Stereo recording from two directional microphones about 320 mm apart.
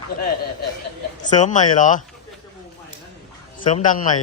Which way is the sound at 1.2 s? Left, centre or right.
Left.